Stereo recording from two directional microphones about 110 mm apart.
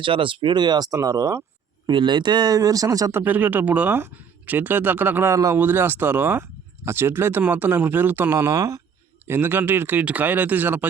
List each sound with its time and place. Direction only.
0.0 s speech: 50° right (ahead or behind); by 1.5 s 25° right (ahead or behind)
1.9 s speech: 45° right (ahead or behind)
3.2 s speech: 15° right (ahead or behind)
5.3 s speech: 30° right (ahead or behind)
5.5 s speech: 20° right (ahead or behind)
9.2 s speech: 20° right (ahead or behind)